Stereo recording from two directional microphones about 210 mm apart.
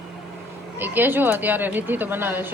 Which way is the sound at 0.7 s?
10° right (ahead or behind).